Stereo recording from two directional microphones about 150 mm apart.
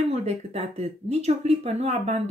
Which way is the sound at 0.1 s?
45° right (ahead or behind).